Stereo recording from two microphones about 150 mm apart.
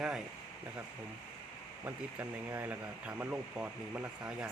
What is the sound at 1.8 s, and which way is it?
Speech, 15° right (ahead or behind).